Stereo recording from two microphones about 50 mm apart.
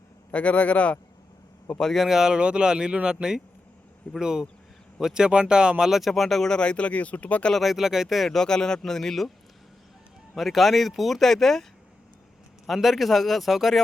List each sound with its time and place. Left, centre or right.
0.3 s speech: left
1.8 s speech: centre
2.0 s speech: centre
5.9 s speech: centre
6.5 s speech: left
7.5 s speech: centre
8.3 s speech: centre
10.3 s speech: centre
12.6 s speech: centre